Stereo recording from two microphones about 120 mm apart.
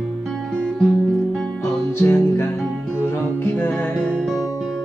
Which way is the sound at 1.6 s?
20° left (ahead or behind).